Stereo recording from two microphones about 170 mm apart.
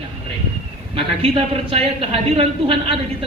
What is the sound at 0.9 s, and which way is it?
A man's voice, 35° right (ahead or behind).